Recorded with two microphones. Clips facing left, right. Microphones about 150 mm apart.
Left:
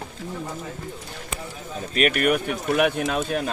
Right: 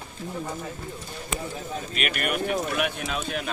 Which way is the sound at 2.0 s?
45° left (ahead or behind).